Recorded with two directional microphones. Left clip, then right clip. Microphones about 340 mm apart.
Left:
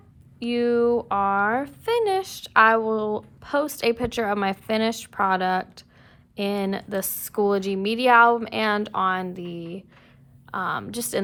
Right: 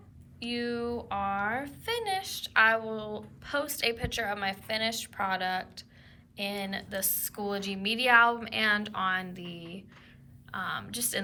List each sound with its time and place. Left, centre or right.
0.3 s speech: centre